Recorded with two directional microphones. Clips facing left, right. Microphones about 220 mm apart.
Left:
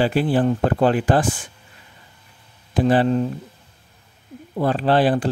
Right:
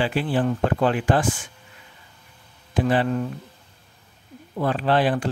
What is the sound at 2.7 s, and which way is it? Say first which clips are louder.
Speech: left 4 dB; 35° left (ahead or behind).